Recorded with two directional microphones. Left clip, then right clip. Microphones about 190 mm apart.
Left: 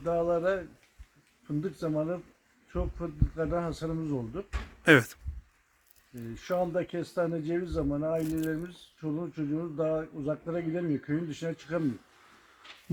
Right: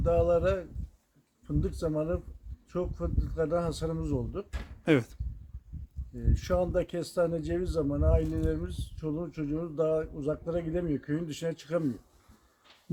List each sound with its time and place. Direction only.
0.0 s speech: 20° right (ahead or behind)
4.8 s speech: 5° left (ahead or behind)
6.3 s speech: 20° right (ahead or behind)